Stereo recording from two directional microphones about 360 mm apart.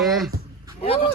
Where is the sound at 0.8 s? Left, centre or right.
Centre.